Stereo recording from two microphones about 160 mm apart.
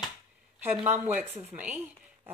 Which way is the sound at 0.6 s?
10° right (ahead or behind).